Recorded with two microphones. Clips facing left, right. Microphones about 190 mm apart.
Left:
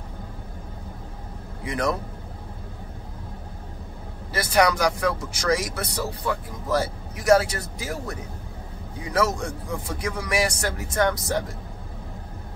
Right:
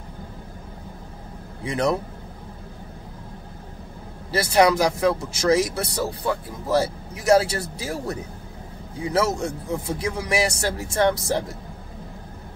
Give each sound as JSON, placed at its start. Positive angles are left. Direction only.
{"t": 1.6, "sound": "speech", "side_deg": -25}
{"t": 4.3, "sound": "speech", "side_deg": -25}